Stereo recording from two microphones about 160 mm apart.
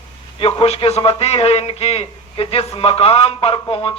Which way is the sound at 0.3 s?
35° left (ahead or behind).